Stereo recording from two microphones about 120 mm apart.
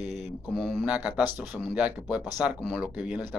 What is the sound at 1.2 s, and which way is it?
Speech, 35° left (ahead or behind).